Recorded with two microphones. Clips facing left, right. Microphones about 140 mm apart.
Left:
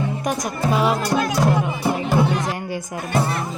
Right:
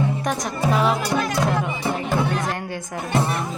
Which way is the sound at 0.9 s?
Centre (ahead or behind).